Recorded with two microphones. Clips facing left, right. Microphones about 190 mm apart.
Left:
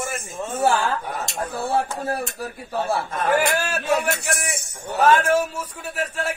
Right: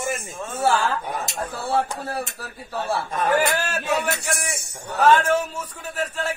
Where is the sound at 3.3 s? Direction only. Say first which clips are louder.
Left 1 dB; 10° left (ahead or behind).